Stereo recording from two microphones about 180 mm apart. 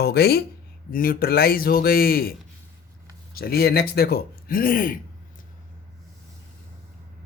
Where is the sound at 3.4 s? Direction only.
60° left (ahead or behind).